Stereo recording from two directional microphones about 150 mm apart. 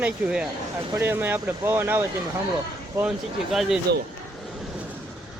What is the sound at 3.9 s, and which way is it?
Speech, 90° right.